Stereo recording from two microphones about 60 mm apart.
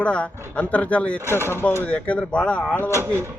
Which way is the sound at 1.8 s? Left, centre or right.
Left.